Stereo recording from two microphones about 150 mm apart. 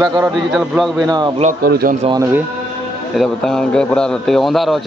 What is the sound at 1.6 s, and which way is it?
Speech, 80° right.